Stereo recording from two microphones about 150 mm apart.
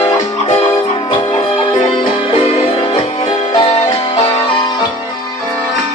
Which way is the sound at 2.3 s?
40° left (ahead or behind).